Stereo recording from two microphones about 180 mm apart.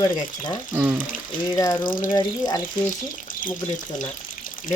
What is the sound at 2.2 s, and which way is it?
Speech, 20° left (ahead or behind).